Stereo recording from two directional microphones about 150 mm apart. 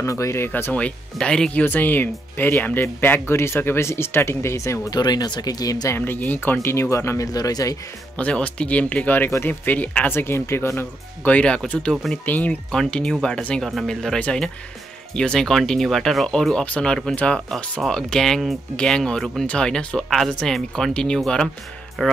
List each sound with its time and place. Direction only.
0.0 s speech: 20° left (ahead or behind)
8.2 s speech: 10° left (ahead or behind)